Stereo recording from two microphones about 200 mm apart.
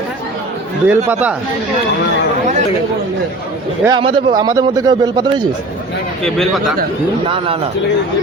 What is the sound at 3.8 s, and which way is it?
A man's voice, 25° right (ahead or behind).